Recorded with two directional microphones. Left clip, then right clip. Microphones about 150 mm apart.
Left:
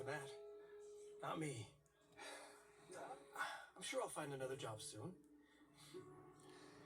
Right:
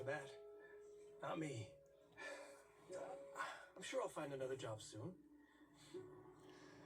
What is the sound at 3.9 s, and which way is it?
Speech, 20° left (ahead or behind).